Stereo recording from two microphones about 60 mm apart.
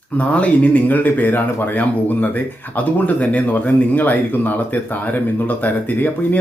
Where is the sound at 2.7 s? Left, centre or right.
Left.